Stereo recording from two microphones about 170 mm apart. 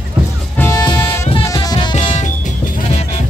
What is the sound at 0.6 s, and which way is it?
Music, 20° left (ahead or behind).